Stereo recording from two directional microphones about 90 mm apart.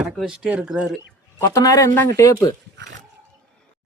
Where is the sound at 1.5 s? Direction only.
40° left (ahead or behind).